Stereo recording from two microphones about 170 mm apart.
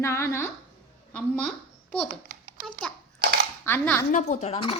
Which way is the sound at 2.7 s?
5° left (ahead or behind).